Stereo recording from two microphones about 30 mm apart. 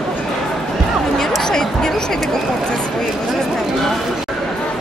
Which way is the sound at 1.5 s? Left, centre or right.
Centre.